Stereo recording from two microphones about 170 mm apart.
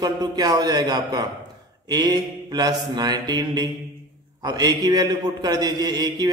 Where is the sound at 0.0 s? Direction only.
25° right (ahead or behind).